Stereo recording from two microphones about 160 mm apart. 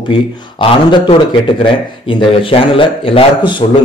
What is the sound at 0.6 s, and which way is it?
Speech, 30° left (ahead or behind).